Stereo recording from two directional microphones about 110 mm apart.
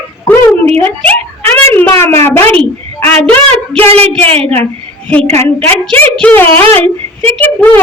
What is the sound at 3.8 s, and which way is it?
Speech, 65° right (ahead or behind).